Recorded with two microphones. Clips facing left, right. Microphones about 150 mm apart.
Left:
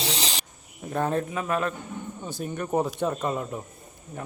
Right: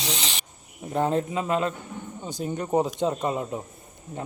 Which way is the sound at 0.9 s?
20° right (ahead or behind).